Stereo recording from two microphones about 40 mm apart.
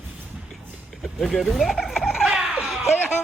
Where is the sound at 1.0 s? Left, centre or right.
Centre.